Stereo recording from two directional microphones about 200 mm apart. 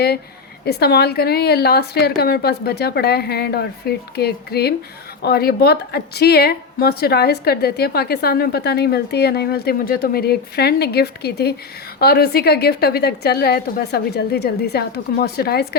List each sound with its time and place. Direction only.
0.6 s a woman's voice: 55° left (ahead or behind)